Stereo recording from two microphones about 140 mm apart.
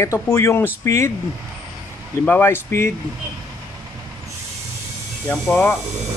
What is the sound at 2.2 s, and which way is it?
Speech, 15° left (ahead or behind).